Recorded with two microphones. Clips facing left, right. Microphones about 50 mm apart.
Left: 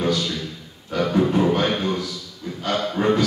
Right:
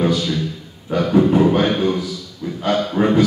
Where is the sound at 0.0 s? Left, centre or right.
Centre.